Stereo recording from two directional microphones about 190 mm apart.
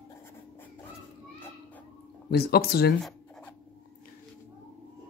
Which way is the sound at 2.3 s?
55° left (ahead or behind).